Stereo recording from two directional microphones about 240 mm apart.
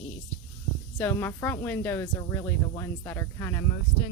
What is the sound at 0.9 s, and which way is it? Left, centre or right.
Speech, centre.